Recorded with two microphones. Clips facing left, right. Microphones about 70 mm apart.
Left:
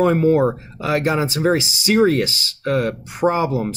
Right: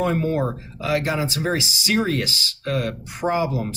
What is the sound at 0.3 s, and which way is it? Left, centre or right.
Speech, left.